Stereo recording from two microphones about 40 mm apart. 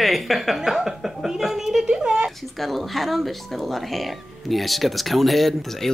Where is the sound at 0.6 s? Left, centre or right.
Centre.